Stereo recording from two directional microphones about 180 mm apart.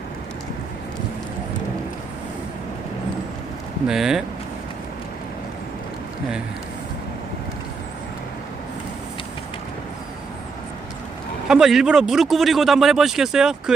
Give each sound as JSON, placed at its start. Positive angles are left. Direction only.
{"t": 3.8, "sound": "a man's voice", "side_deg": -5}
{"t": 11.4, "sound": "a man's voice", "side_deg": 0}